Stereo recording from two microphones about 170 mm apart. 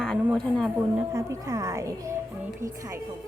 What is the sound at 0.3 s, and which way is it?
Speech, centre (ahead or behind).